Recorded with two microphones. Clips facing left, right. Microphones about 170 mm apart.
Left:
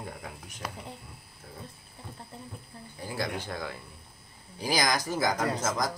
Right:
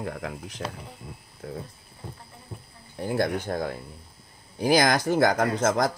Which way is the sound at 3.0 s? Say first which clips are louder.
Right 8 dB; 60° right (ahead or behind).